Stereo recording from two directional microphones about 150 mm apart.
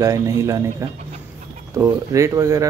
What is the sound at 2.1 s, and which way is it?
Speech, 20° right (ahead or behind).